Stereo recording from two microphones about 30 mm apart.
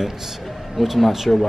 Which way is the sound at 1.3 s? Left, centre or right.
Centre.